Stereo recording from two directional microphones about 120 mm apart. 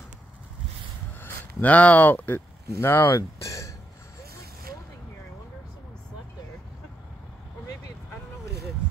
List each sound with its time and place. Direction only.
1.2 s speech: 15° left (ahead or behind)